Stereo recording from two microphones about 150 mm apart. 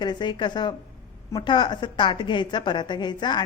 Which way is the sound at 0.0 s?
30° left (ahead or behind).